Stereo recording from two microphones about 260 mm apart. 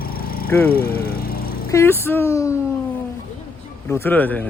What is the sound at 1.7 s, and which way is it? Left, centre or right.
Speech, centre.